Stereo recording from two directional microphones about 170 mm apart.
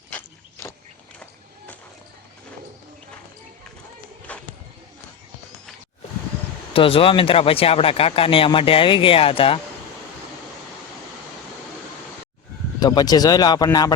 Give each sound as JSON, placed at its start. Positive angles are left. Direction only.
{"t": 4.3, "sound": "a sound", "side_deg": 10}
{"t": 6.7, "sound": "speech", "side_deg": 35}
{"t": 12.8, "sound": "speech", "side_deg": 25}